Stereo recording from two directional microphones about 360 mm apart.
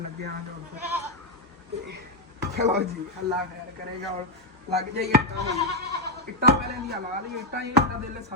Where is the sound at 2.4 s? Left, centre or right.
Right.